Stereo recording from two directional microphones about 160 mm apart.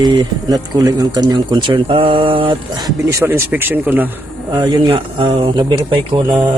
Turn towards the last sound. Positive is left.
turn(degrees=-30)  # may be behind; listen again after turning